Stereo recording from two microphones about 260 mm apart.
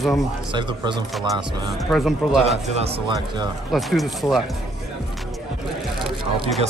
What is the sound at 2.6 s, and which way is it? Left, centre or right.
Speech, right.